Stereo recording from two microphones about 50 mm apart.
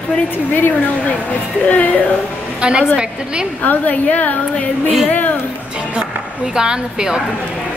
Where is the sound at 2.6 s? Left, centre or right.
Centre.